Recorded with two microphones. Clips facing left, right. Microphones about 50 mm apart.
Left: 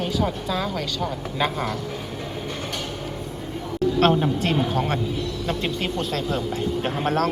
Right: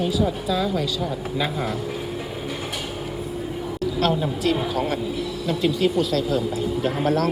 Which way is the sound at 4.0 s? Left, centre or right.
Left.